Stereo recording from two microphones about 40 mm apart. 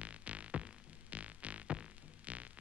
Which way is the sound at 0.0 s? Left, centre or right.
Right.